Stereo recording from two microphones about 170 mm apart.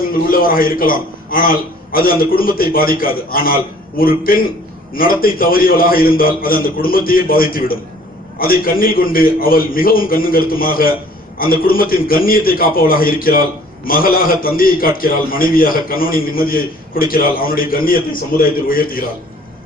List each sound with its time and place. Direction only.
0.1 s a man's voice: 55° left (ahead or behind)